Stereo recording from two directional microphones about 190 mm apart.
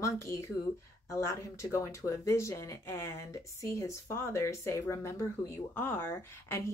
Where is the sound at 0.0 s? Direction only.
15° left (ahead or behind).